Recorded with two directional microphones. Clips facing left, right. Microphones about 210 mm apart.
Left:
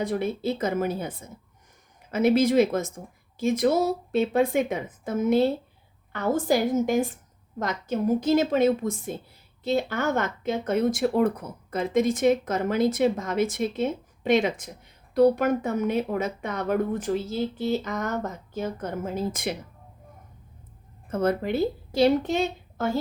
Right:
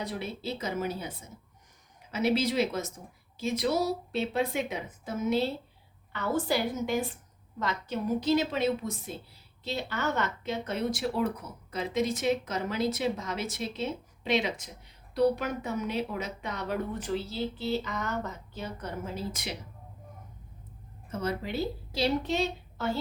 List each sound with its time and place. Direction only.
0.0 s speech: 50° left (ahead or behind)
21.1 s a woman's voice: 55° left (ahead or behind)